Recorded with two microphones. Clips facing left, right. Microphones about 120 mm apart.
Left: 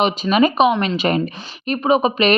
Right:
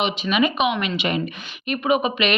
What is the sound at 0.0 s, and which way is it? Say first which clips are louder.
Speech: left 5 dB; 40° left (ahead or behind).